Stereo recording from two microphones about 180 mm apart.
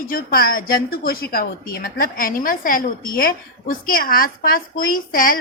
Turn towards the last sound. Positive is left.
turn(degrees=50)  # may be behind; listen again after turning